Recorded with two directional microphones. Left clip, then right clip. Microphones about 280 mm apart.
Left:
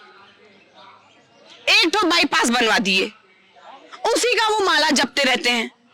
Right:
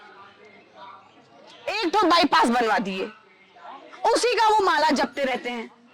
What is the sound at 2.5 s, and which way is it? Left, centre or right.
Speech, left.